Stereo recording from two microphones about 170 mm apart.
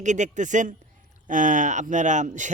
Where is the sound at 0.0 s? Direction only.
45° right (ahead or behind).